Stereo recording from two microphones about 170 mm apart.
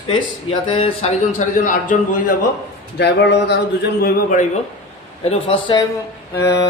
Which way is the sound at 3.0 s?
85° left.